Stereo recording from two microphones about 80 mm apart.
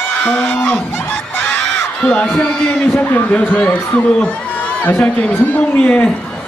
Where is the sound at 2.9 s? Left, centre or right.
Left.